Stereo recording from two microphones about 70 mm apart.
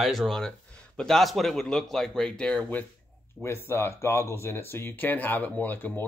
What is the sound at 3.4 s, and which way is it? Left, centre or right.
Speech, left.